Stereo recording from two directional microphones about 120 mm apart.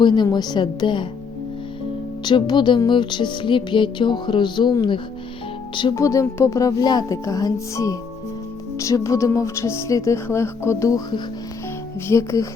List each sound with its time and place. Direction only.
0.0 s music: 40° left (ahead or behind)
2.2 s music: 40° left (ahead or behind)
5.9 s speech: 25° left (ahead or behind)
12.0 s speech: 25° left (ahead or behind)